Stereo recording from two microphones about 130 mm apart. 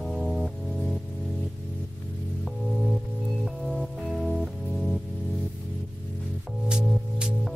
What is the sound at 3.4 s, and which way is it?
Music, centre (ahead or behind).